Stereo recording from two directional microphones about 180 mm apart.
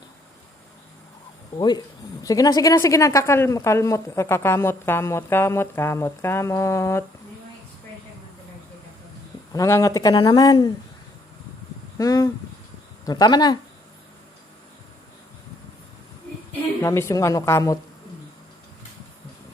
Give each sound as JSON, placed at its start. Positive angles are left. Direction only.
{"t": 1.5, "sound": "speech", "side_deg": 25}
{"t": 9.5, "sound": "speech", "side_deg": 15}
{"t": 11.9, "sound": "speech", "side_deg": 20}
{"t": 16.8, "sound": "speech", "side_deg": 15}